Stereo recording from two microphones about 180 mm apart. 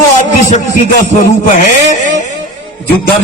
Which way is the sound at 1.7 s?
45° left (ahead or behind).